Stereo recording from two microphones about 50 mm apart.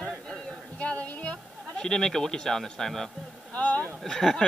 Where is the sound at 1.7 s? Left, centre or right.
Centre.